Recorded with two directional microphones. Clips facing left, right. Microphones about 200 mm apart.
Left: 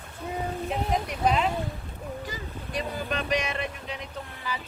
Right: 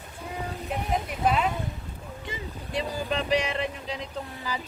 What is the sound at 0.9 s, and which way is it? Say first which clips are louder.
Speech: right 1 dB; 5° right (ahead or behind).